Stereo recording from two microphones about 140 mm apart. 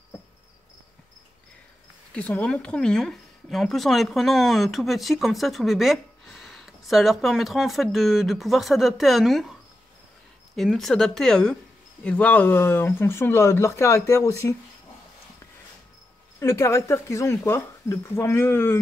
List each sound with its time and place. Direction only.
2.1 s speech: 10° left (ahead or behind)
10.5 s speech: centre (ahead or behind); by 14.5 s 20° left (ahead or behind)
16.3 s speech: 20° left (ahead or behind)